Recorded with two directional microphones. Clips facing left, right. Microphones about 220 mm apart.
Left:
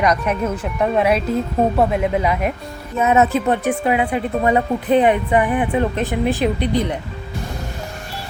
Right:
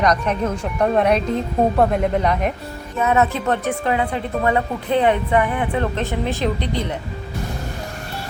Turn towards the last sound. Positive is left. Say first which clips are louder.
# left 4 dB
turn(degrees=15)  # may be behind; listen again after turning